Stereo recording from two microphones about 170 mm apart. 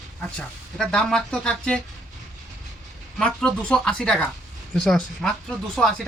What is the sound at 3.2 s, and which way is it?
Speech, 5° left (ahead or behind).